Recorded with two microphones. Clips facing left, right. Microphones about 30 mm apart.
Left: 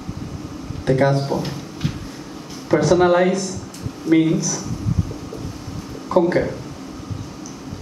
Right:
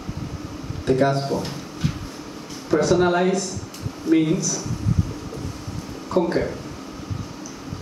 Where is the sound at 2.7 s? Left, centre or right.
Left.